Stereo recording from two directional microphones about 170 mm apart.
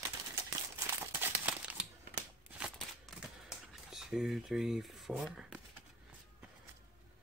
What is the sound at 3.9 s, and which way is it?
Speech, centre (ahead or behind).